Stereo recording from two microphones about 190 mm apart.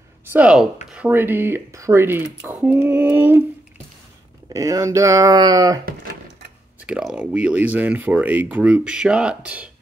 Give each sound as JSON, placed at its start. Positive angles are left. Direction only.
{"t": 0.3, "sound": "speech", "side_deg": -5}
{"t": 4.5, "sound": "speech", "side_deg": -20}
{"t": 6.9, "sound": "speech", "side_deg": -5}